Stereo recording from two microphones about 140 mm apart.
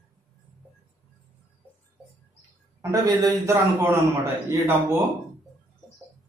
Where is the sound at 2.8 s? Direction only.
20° right (ahead or behind).